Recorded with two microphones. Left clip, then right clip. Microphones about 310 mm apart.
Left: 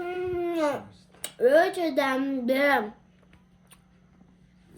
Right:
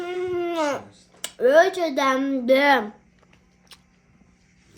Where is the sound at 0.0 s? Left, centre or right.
Centre.